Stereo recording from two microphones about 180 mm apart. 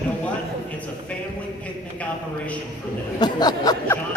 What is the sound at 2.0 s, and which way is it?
Speech, 5° left (ahead or behind).